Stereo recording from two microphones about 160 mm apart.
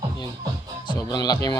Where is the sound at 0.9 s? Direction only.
25° left (ahead or behind).